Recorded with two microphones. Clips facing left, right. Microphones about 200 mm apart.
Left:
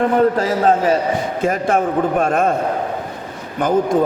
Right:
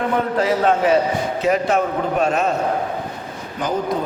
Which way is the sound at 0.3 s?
40° left (ahead or behind).